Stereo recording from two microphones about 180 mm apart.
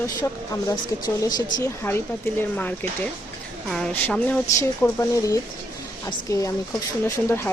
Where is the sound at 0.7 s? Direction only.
20° left (ahead or behind).